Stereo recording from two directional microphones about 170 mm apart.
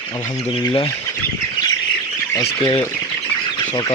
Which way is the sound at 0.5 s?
30° left (ahead or behind).